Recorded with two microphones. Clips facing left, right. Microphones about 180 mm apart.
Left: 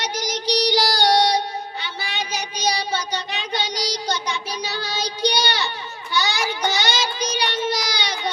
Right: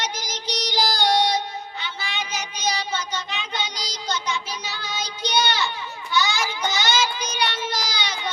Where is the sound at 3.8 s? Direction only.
65° left (ahead or behind).